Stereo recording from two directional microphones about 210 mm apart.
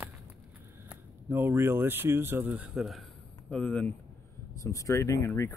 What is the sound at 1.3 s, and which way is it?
Speech, 10° right (ahead or behind).